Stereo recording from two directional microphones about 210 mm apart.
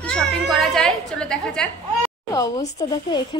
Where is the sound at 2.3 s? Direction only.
15° left (ahead or behind).